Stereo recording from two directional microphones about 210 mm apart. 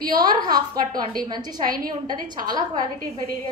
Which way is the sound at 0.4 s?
20° right (ahead or behind).